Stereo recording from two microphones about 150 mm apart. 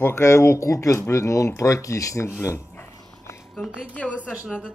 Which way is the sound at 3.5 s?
5° left (ahead or behind).